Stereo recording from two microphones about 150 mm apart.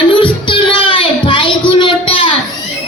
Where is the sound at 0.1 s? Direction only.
35° left (ahead or behind).